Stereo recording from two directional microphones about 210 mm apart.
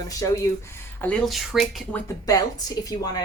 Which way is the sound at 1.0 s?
5° left (ahead or behind).